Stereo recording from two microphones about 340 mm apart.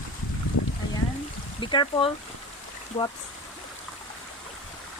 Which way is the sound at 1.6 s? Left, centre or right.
Centre.